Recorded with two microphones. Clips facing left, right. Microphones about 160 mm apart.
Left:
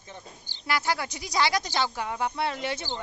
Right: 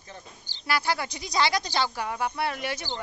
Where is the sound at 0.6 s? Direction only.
15° left (ahead or behind).